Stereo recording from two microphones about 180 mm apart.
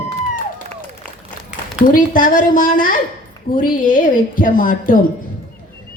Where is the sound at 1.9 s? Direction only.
50° left (ahead or behind).